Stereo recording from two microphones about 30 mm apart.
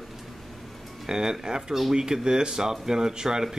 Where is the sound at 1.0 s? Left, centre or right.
Right.